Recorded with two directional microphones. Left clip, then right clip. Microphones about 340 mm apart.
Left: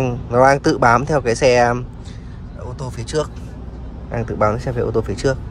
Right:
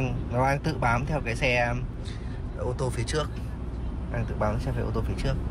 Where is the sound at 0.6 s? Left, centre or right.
Left.